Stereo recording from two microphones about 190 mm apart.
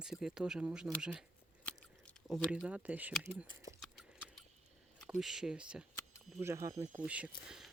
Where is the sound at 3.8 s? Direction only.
Centre (ahead or behind).